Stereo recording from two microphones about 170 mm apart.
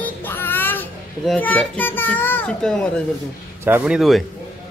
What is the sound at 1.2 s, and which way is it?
A child's voice, 10° left (ahead or behind).